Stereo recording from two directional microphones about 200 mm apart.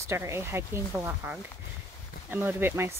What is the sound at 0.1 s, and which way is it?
Speech, 15° right (ahead or behind).